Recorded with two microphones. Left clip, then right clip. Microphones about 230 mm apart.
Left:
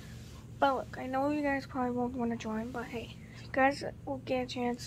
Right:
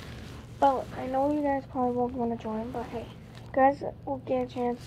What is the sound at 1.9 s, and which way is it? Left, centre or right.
Speech, left.